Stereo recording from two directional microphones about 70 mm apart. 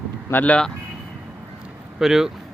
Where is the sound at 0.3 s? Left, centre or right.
Left.